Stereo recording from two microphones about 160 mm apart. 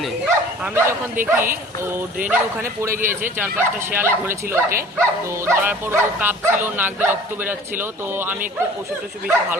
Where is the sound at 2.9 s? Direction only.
55° right (ahead or behind).